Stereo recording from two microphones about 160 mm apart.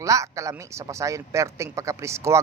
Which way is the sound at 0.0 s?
20° right (ahead or behind).